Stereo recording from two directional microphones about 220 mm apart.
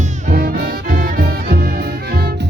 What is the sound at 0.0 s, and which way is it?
Music, 40° right (ahead or behind).